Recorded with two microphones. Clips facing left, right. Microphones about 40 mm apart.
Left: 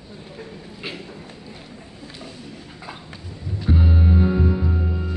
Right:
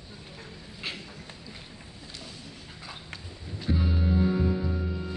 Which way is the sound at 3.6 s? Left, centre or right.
Left.